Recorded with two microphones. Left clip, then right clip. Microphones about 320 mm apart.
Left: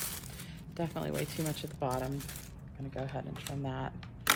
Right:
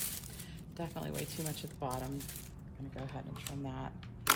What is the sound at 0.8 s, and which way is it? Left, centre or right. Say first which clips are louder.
Speech: left 6 dB; left.